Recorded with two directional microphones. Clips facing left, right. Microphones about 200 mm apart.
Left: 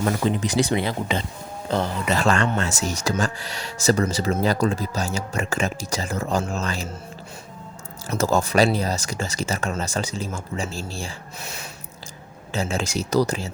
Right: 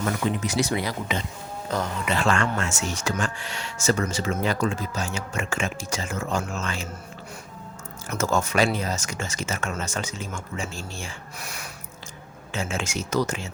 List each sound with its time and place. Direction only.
0.0 s speech: 30° left (ahead or behind)
8.1 s speech: 35° left (ahead or behind)